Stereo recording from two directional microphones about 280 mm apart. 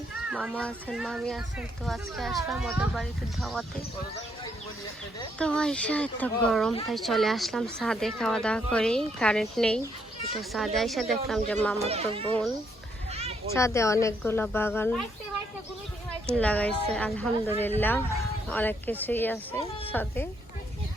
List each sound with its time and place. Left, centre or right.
0.3 s speech: centre
5.4 s speech: centre
11.8 s a child's voice: right
13.1 s children playing: right
13.5 s speech: centre
16.4 s speech: centre